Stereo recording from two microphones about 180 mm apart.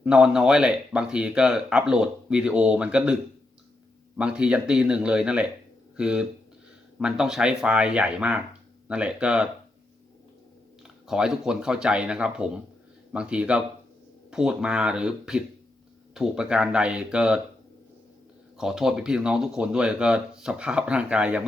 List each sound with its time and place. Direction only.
0.0 s speech: 5° right (ahead or behind)
4.2 s speech: 5° right (ahead or behind)
10.8 s speech: 5° right (ahead or behind)
18.5 s speech: 5° right (ahead or behind)